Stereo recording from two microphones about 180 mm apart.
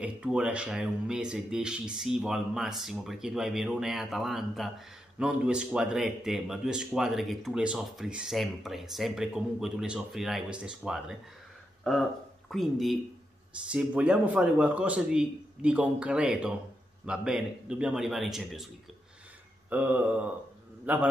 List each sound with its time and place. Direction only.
0.0 s speech: 5° right (ahead or behind)
19.7 s speech: 10° right (ahead or behind)